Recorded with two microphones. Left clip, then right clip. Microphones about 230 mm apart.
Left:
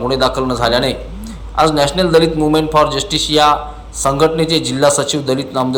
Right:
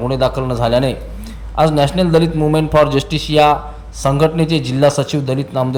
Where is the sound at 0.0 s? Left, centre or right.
Right.